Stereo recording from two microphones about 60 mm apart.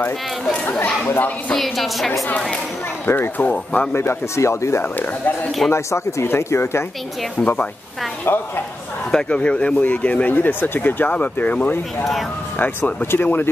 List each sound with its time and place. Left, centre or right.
1.5 s a woman's voice: centre
3.1 s speech: left
3.4 s speech: left
3.9 s speech: left
4.9 s speech: left
5.7 s speech: left
8.3 s speech: left
9.1 s speech: centre
12.0 s a woman's voice: centre
12.5 s speech: left